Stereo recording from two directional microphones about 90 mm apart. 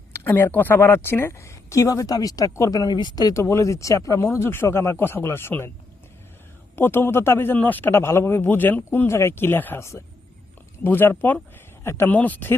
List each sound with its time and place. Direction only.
0.3 s speech: 20° left (ahead or behind); by 3.3 s 50° left (ahead or behind)
3.3 s speech: 30° left (ahead or behind)
6.7 s a man's voice: 25° left (ahead or behind)